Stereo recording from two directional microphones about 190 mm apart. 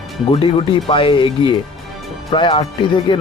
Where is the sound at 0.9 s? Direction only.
25° left (ahead or behind).